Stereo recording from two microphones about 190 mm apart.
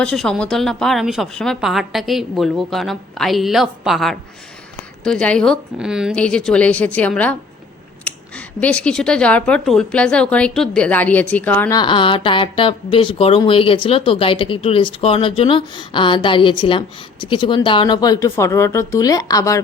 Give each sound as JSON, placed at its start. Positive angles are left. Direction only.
{"t": 0.0, "sound": "a woman's voice", "side_deg": 5}
{"t": 8.6, "sound": "a woman's voice", "side_deg": 5}
{"t": 11.8, "sound": "speech", "side_deg": 25}